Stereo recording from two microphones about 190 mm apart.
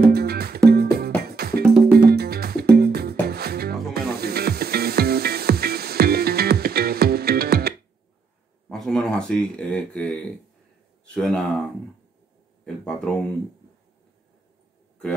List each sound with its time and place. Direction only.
0.1 s music: 55° right (ahead or behind)
8.6 s a sound: centre (ahead or behind)
11.1 s speech: centre (ahead or behind)
12.6 s speech: 5° left (ahead or behind)